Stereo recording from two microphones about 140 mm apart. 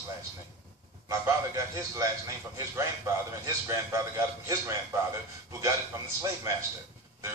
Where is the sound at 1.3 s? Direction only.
20° right (ahead or behind).